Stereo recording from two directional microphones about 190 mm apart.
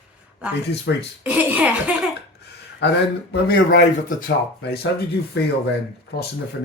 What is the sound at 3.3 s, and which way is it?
Speech, 60° left (ahead or behind).